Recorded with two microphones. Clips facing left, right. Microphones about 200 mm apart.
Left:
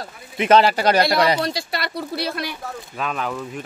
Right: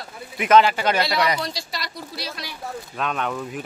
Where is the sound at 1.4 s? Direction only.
60° left (ahead or behind).